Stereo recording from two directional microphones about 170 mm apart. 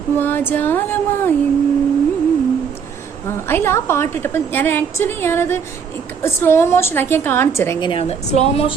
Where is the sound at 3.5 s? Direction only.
15° left (ahead or behind).